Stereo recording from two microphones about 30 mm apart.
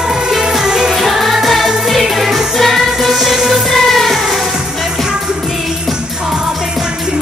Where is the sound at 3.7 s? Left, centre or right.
Centre.